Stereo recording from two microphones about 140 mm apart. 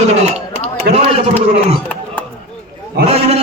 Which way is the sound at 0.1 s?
50° right (ahead or behind).